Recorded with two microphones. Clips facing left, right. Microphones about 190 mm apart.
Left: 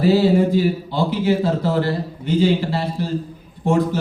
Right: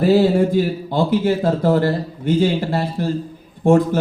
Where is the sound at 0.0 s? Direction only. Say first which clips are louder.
Right 1 dB; 50° right (ahead or behind).